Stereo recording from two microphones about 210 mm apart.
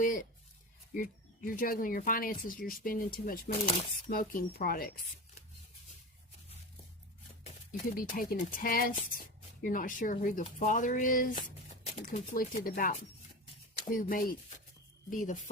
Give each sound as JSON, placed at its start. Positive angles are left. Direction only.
{"t": 0.0, "sound": "speech", "side_deg": 40}
{"t": 7.9, "sound": "speech", "side_deg": 40}